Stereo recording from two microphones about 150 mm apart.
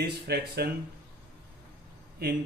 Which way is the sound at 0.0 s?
90° right.